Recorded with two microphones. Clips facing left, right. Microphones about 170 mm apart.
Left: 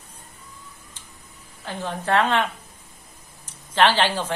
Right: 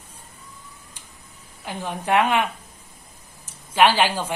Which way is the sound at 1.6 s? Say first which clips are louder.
Even; 15° right (ahead or behind).